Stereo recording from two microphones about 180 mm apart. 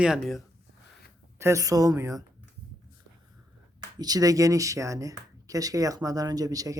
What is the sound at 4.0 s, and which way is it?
Speech, 20° right (ahead or behind).